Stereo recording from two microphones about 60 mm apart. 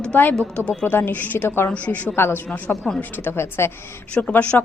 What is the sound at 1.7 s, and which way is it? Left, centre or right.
Speech, left.